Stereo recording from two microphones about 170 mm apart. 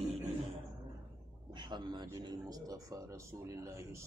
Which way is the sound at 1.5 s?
25° right (ahead or behind).